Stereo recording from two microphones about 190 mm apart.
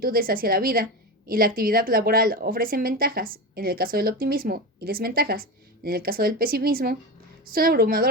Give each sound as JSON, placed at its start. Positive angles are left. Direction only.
{"t": 0.0, "sound": "a woman's voice", "side_deg": -50}